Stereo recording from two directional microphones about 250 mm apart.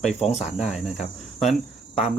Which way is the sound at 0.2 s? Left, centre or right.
Left.